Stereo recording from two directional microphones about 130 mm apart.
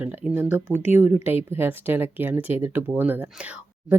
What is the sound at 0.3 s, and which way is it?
Speech, 15° right (ahead or behind).